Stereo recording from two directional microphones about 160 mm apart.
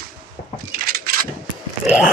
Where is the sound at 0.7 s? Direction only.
65° right (ahead or behind).